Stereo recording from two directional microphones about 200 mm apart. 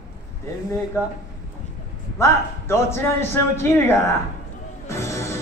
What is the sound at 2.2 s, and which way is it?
A man's voice, 15° left (ahead or behind).